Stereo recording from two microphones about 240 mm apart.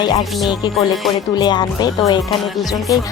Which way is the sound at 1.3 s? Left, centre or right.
Centre.